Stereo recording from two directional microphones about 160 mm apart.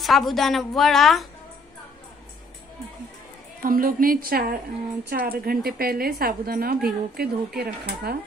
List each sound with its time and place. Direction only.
0.0 s a woman's voice: centre (ahead or behind)
3.6 s a woman's voice: 60° right (ahead or behind); by 8.2 s 80° right